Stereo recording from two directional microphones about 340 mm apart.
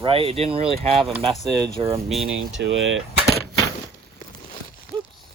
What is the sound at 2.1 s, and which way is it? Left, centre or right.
Speech, centre.